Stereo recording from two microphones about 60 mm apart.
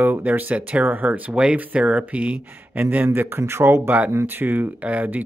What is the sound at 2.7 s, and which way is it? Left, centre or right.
Speech, right.